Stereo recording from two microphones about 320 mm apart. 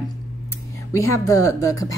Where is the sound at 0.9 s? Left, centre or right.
Centre.